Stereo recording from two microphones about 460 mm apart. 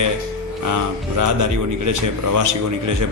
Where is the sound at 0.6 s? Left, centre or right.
Right.